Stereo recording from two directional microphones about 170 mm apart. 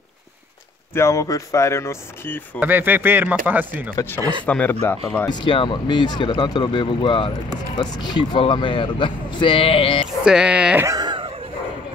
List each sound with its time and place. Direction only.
0.9 s speech: 15° left (ahead or behind)
2.6 s speech: 10° right (ahead or behind)
3.9 s speech: 15° left (ahead or behind)
4.2 s speech: 30° right (ahead or behind)
4.5 s speech: 10° left (ahead or behind)
5.3 s speech: 30° left (ahead or behind)
10.2 s speech: 5° right (ahead or behind)
10.9 s a sound: 25° right (ahead or behind)